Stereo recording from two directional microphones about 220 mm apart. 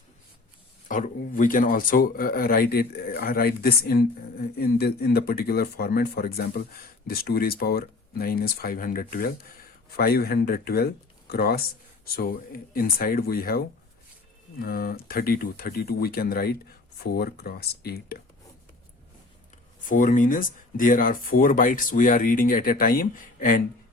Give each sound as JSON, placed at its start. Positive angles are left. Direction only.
{"t": 0.9, "sound": "speech", "side_deg": 35}
{"t": 14.6, "sound": "speech", "side_deg": 45}
{"t": 19.9, "sound": "speech", "side_deg": 35}